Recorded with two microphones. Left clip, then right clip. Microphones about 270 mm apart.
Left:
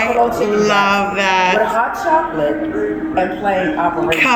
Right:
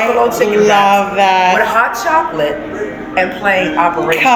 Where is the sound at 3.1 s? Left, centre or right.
Right.